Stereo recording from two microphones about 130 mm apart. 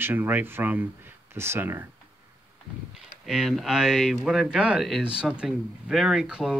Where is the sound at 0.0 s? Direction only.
15° right (ahead or behind).